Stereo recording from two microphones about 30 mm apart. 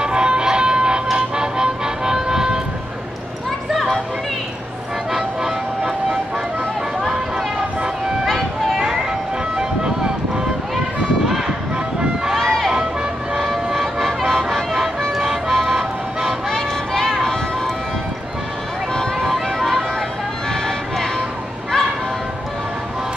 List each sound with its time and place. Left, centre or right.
0.0 s music: right
5.1 s music: centre
9.6 s vehicle: right
11.2 s run: centre
12.4 s run: centre
14.0 s music: centre
15.1 s music: centre
16.5 s vehicle: left
19.3 s music: centre